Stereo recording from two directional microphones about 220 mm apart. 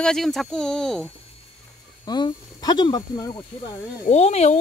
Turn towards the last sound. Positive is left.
turn(degrees=30)  # may be behind; listen again after turning